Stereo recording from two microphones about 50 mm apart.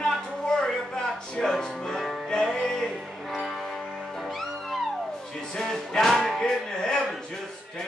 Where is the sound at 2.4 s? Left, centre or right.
Centre.